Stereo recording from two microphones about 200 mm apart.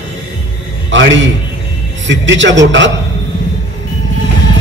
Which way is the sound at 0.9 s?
65° right (ahead or behind).